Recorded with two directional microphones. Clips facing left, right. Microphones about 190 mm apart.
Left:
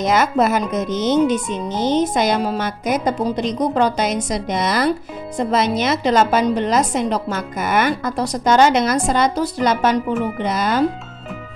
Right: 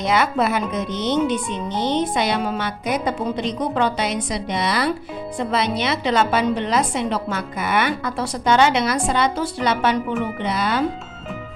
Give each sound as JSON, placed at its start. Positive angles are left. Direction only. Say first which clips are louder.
{"t": 0.0, "sound": "a woman's voice", "louder": "left 3 dB", "side_deg": 45}